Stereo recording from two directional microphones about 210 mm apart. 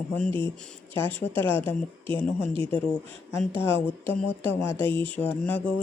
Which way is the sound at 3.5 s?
25° right (ahead or behind).